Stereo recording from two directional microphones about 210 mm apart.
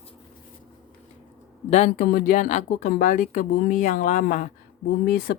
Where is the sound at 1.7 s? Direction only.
35° left (ahead or behind).